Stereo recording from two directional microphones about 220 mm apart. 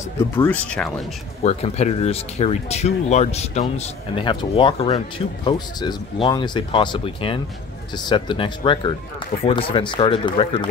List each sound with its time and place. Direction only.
0.4 s speech: 5° left (ahead or behind)
1.4 s speech: 30° left (ahead or behind)